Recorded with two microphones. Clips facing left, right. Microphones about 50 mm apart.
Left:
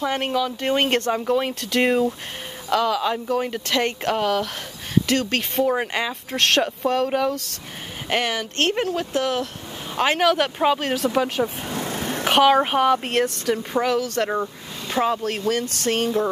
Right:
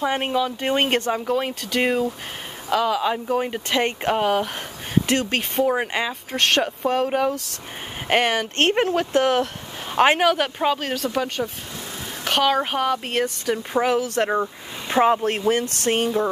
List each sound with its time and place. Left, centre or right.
0.0 s speech: centre
8.1 s speech: right
10.3 s speech: centre
11.7 s vehicle: left
12.3 s speech: centre
13.8 s speech: centre
15.9 s speech: centre